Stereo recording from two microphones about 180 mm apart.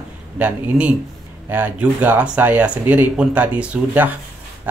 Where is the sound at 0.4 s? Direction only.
5° right (ahead or behind).